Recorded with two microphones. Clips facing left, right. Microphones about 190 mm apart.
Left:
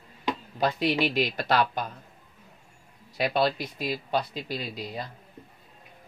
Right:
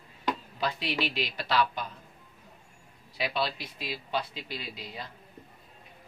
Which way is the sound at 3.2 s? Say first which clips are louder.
Left 6 dB; 45° left (ahead or behind).